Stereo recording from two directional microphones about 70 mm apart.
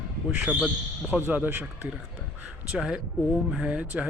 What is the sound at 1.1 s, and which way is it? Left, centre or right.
Speech, right.